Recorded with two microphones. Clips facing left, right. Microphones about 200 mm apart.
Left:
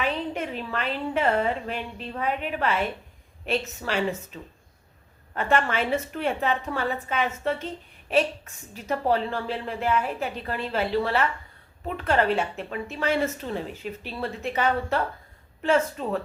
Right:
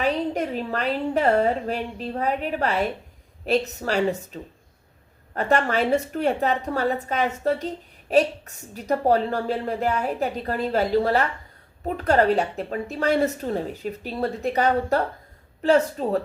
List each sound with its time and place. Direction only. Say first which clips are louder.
0.0 s a woman's voice: right 4 dB; 40° right (ahead or behind)
5.3 s a woman's voice: right 3 dB; 40° right (ahead or behind)